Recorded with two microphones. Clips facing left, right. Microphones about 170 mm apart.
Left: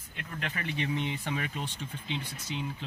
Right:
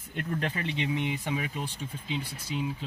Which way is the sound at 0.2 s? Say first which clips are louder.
Right 7 dB; 45° right (ahead or behind).